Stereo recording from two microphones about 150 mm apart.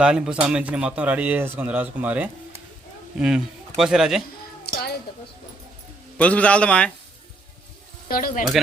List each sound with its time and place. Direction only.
0.0 s a man's voice: 5° right (ahead or behind)
6.1 s a man's voice: 10° left (ahead or behind)
8.0 s speech: 65° left (ahead or behind)